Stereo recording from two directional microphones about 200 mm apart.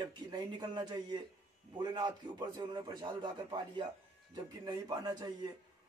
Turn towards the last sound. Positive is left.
turn(degrees=-20)  # may be behind; listen again after turning